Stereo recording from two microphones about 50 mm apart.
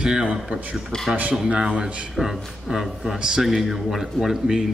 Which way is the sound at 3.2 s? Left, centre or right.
Centre.